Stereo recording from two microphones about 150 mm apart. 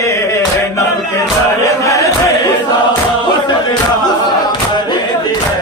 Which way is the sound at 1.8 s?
20° left (ahead or behind).